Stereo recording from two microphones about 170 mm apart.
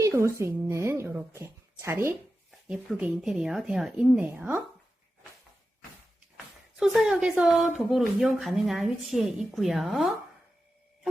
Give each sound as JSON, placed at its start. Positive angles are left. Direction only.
{"t": 0.0, "sound": "a woman's voice", "side_deg": -15}
{"t": 2.5, "sound": "speech", "side_deg": -5}
{"t": 6.3, "sound": "speech", "side_deg": 0}